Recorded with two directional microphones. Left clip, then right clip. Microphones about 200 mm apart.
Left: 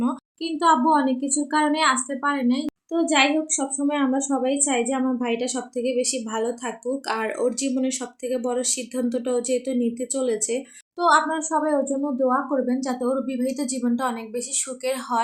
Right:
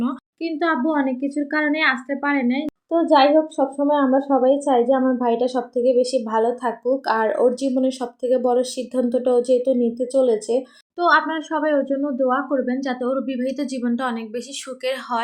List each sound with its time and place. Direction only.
0.0 s a woman's voice: 5° right (ahead or behind)
11.0 s speech: 5° right (ahead or behind)